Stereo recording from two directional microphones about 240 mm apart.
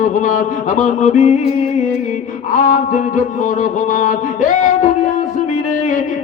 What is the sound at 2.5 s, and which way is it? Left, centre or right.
Music, left.